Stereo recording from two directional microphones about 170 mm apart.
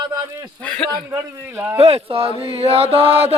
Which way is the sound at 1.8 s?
35° right (ahead or behind).